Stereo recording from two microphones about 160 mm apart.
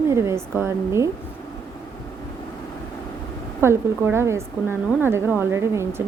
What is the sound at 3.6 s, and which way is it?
A woman's voice, 15° right (ahead or behind).